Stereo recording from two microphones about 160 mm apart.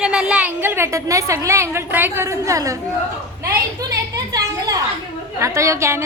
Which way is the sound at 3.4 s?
20° right (ahead or behind).